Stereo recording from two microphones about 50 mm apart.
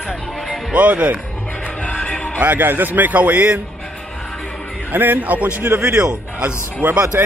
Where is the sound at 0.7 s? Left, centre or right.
Right.